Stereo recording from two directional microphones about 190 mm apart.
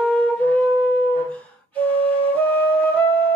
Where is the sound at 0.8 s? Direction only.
5° left (ahead or behind).